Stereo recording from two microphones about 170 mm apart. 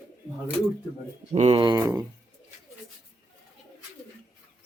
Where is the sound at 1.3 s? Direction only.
40° right (ahead or behind).